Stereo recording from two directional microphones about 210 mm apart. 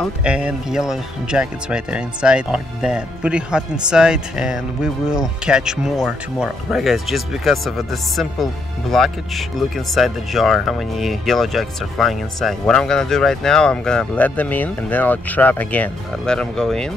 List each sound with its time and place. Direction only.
0.0 s speech: 5° right (ahead or behind)